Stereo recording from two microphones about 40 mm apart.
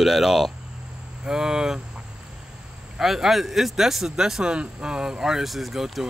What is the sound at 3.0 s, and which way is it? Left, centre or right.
Speech, centre.